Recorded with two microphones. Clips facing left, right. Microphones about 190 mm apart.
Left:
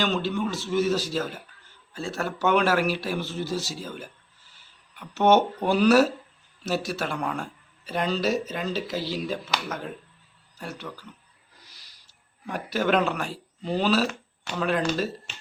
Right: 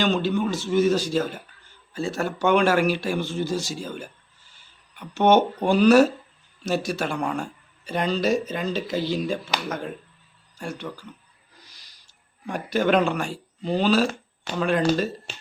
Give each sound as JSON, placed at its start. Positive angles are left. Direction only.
{"t": 0.0, "sound": "speech", "side_deg": 0}
{"t": 11.6, "sound": "a sound", "side_deg": 5}
{"t": 15.3, "sound": "finger snapping", "side_deg": -35}